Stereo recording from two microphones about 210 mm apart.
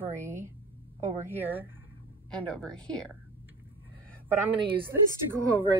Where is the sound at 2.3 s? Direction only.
5° left (ahead or behind).